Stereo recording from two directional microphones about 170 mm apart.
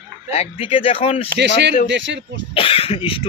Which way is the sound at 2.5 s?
35° left (ahead or behind).